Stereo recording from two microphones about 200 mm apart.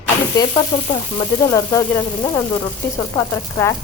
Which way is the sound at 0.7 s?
20° left (ahead or behind).